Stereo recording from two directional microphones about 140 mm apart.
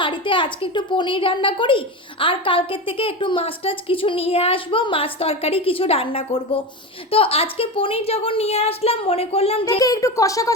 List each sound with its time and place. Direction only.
0.0 s a woman's voice: 35° left (ahead or behind)
9.7 s speech: 25° left (ahead or behind)